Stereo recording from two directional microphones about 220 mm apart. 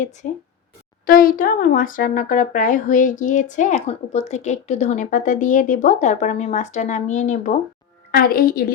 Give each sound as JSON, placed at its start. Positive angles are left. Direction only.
{"t": 0.2, "sound": "speech", "side_deg": 35}